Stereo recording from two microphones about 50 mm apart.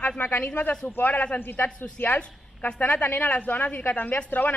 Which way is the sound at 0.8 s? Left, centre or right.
Left.